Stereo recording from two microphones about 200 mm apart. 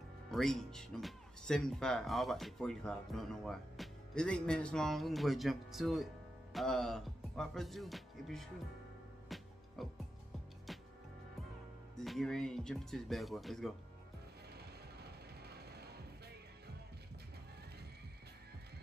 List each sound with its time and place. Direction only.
0.3 s speech: centre (ahead or behind)
9.3 s music: centre (ahead or behind)
9.8 s speech: centre (ahead or behind)
10.7 s music: centre (ahead or behind)
12.0 s speech: centre (ahead or behind)
14.6 s music: 55° right (ahead or behind)